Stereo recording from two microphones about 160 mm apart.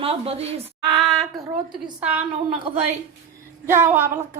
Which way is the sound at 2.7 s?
35° right (ahead or behind).